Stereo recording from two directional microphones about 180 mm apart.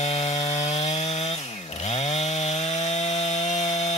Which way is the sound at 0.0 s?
40° left (ahead or behind).